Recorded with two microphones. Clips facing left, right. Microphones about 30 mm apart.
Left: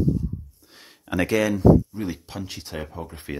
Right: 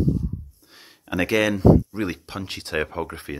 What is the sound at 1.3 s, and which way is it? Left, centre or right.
Speech, centre.